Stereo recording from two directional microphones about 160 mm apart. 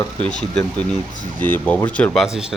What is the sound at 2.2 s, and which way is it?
Speech, 5° right (ahead or behind).